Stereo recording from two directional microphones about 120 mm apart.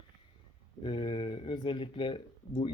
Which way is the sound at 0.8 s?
40° left (ahead or behind).